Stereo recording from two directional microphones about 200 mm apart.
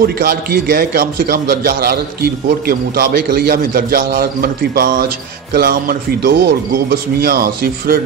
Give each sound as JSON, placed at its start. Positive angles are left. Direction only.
{"t": 0.0, "sound": "a man's voice", "side_deg": -50}